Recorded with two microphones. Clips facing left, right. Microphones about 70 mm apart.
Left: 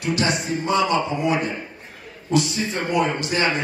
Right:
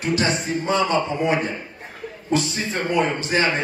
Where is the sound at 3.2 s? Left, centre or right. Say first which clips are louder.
Right 1 dB; right.